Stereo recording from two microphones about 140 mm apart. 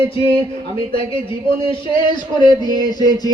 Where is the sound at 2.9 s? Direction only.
30° left (ahead or behind).